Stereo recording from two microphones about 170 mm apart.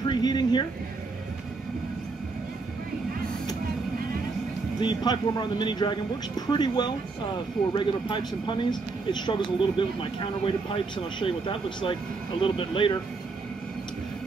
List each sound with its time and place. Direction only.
0.0 s speech: 25° left (ahead or behind)
4.7 s speech: 25° left (ahead or behind)